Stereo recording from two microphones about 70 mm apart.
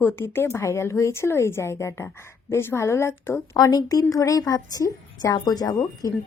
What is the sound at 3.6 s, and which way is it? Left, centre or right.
A woman's voice, left.